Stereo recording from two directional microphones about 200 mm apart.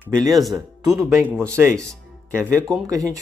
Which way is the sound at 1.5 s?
10° right (ahead or behind).